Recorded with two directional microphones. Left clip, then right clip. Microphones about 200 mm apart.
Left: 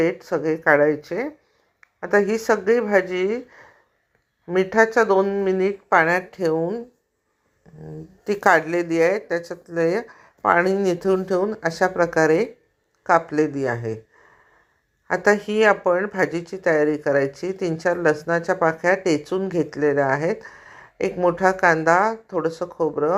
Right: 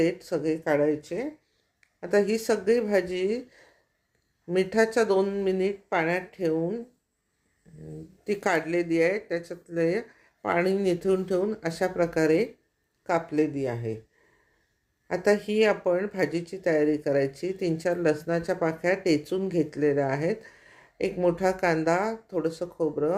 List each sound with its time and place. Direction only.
0.3 s a woman's voice: centre (ahead or behind)
1.8 s speech: 5° right (ahead or behind)
15.0 s speech: centre (ahead or behind)